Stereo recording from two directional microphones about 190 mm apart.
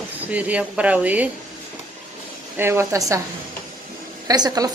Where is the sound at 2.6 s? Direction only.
15° right (ahead or behind).